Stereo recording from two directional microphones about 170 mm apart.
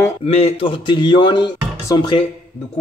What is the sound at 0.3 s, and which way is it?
A man's voice, 35° left (ahead or behind).